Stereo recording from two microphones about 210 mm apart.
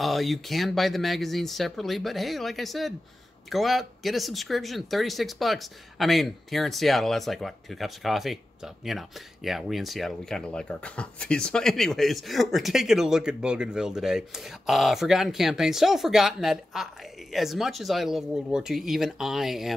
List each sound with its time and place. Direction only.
0.0 s speech: centre (ahead or behind)